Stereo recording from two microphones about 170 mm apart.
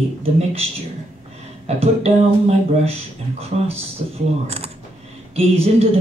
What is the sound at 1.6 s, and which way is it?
Speech, 35° right (ahead or behind).